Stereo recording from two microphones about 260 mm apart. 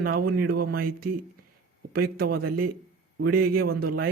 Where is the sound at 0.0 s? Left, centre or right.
Right.